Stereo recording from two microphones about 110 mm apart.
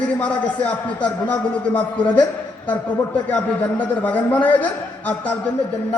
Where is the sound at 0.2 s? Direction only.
15° left (ahead or behind).